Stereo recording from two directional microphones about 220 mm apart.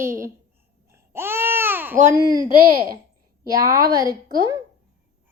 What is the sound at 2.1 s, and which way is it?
Speech, 15° right (ahead or behind).